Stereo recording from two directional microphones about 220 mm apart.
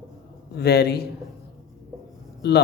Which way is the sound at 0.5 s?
45° left (ahead or behind).